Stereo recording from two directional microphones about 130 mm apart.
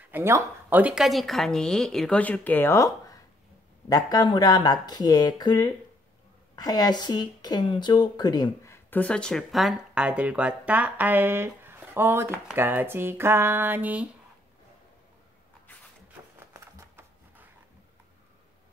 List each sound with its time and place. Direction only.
0.1 s a woman's voice: 15° right (ahead or behind); by 8.7 s 30° left (ahead or behind)
8.7 s speech: 10° left (ahead or behind); by 14.0 s 15° right (ahead or behind)
16.5 s a sound: 15° right (ahead or behind)